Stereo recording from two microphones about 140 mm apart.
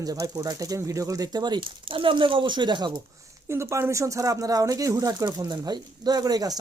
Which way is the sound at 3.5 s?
20° right (ahead or behind).